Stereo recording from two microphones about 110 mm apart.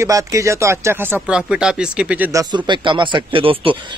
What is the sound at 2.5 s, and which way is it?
Speech, 45° right (ahead or behind).